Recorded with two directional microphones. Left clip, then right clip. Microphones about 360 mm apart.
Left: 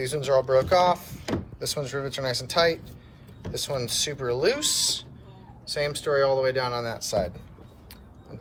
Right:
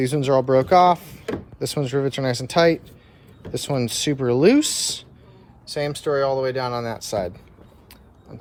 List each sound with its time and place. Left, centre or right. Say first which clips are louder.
0.0 s speech: right 4 dB; centre